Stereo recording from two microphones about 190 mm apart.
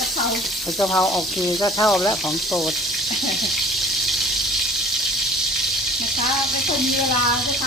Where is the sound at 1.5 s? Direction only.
20° left (ahead or behind).